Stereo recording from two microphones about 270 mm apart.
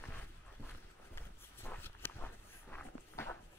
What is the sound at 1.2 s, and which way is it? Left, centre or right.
Walk, centre.